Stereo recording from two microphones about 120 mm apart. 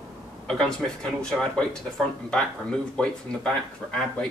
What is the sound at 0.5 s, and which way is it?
A man's voice, 5° left (ahead or behind).